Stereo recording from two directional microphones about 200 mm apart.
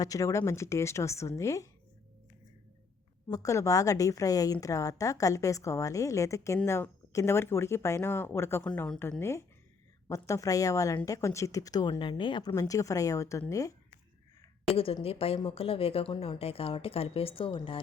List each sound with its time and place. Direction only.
0.0 s a woman's voice: 15° left (ahead or behind)
3.2 s a woman's voice: 15° left (ahead or behind)
14.7 s a woman's voice: 30° left (ahead or behind)